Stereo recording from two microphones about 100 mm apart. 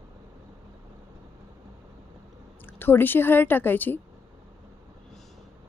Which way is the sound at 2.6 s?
20° left (ahead or behind).